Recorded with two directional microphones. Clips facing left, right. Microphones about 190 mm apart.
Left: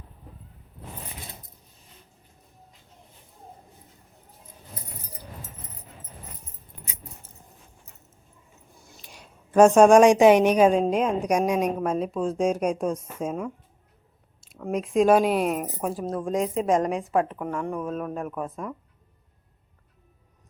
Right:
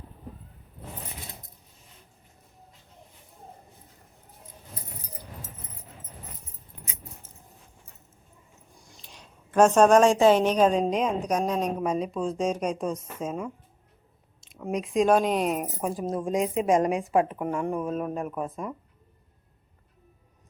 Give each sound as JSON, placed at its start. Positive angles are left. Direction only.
{"t": 9.0, "sound": "a woman's voice", "side_deg": 10}
{"t": 14.5, "sound": "speech", "side_deg": 5}